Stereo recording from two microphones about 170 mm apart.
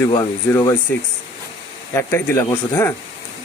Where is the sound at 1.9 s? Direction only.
15° left (ahead or behind).